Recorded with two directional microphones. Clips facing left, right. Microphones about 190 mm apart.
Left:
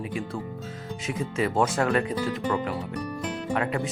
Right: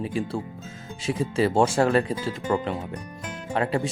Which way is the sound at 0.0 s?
30° right (ahead or behind).